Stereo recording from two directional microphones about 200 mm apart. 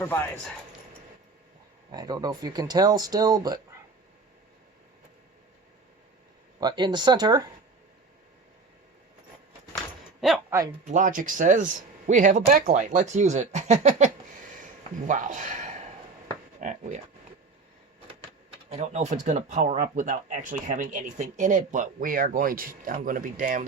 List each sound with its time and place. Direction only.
0.0 s speech: 10° left (ahead or behind)
1.9 s speech: 20° right (ahead or behind)
6.6 s speech: 20° right (ahead or behind)
10.2 s a sound: centre (ahead or behind)
10.5 s speech: 15° right (ahead or behind)
10.8 s speech: 40° right (ahead or behind)
18.7 s speech: 35° right (ahead or behind)